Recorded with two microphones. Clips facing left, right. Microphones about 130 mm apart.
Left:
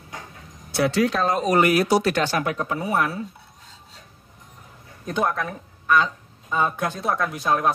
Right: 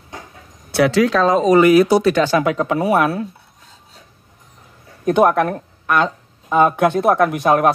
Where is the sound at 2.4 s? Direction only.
90° right.